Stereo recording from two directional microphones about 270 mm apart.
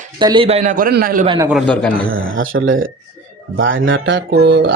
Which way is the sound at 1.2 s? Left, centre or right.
Centre.